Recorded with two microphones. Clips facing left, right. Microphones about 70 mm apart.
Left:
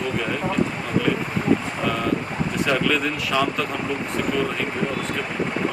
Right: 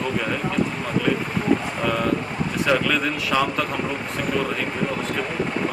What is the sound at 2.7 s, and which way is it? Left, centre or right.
Speech, centre.